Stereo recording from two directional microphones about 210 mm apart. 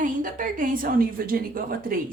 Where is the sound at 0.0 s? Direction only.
40° right (ahead or behind).